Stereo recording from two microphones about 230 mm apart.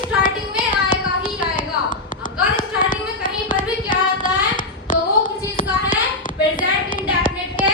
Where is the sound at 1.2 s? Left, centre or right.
Left.